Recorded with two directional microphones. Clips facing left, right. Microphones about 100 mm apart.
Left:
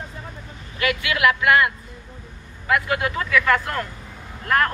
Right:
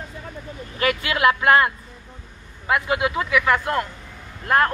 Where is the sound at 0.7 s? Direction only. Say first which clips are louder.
Right 1 dB; 35° right (ahead or behind).